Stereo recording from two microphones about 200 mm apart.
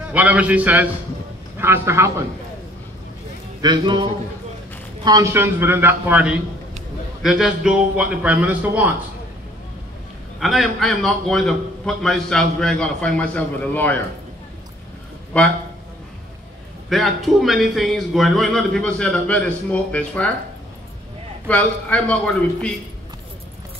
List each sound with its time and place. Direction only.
0.1 s a man's voice: 5° right (ahead or behind)
3.6 s a man's voice: 20° right (ahead or behind)
10.4 s a man's voice: centre (ahead or behind)
15.3 s a man's voice: 5° left (ahead or behind)
16.9 s a man's voice: centre (ahead or behind)
21.5 s a man's voice: 5° left (ahead or behind)